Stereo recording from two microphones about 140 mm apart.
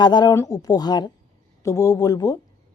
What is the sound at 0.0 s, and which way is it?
A woman's voice, 30° left (ahead or behind).